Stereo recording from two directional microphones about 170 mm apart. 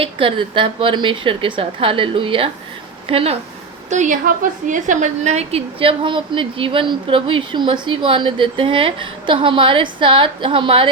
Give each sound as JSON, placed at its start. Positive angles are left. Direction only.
{"t": 0.0, "sound": "a woman's voice", "side_deg": -30}
{"t": 3.8, "sound": "a woman's voice", "side_deg": -45}